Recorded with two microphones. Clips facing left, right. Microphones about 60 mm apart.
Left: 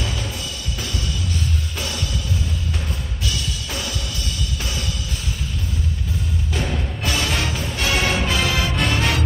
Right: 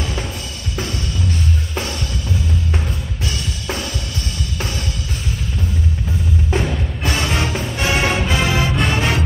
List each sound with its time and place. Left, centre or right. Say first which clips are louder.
6.5 s music: right 3 dB; right